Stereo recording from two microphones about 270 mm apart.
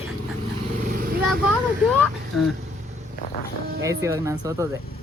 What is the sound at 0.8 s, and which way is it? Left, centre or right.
Vehicle, right.